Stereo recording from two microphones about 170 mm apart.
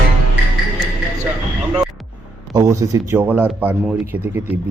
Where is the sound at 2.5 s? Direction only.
20° right (ahead or behind).